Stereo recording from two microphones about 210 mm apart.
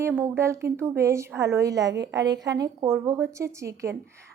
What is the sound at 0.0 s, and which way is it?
A woman's voice, 10° right (ahead or behind).